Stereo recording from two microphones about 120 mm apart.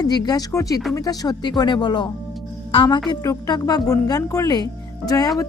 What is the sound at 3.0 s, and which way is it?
Speech, 30° left (ahead or behind).